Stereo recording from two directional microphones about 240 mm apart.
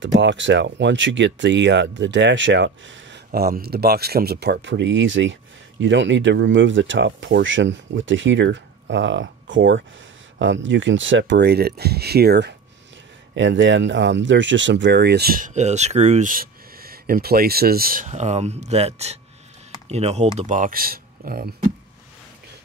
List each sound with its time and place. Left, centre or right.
0.0 s speech: right